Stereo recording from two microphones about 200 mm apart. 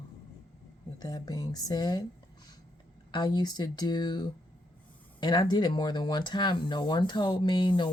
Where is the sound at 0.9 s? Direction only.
20° left (ahead or behind).